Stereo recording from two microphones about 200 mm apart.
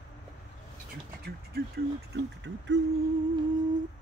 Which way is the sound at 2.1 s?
60° right (ahead or behind).